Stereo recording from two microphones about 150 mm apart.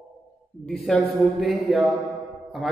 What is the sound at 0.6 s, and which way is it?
A man's voice, 5° left (ahead or behind).